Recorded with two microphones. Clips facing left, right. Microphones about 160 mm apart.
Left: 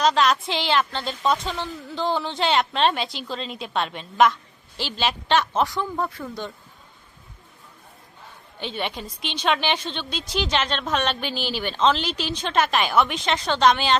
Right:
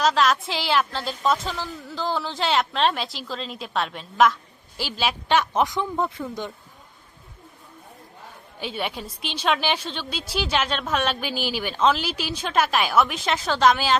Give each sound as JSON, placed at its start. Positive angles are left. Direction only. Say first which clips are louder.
{"t": 0.0, "sound": "a woman's voice", "louder": "left 1 dB", "side_deg": 0}
{"t": 8.5, "sound": "a woman's voice", "louder": "even", "side_deg": -5}